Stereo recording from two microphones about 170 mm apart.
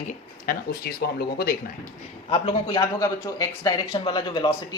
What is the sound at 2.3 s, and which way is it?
Speech, 30° left (ahead or behind).